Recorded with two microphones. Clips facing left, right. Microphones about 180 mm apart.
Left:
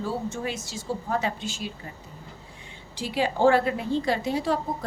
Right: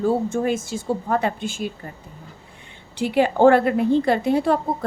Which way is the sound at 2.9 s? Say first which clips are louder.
Right 7 dB; 60° right (ahead or behind).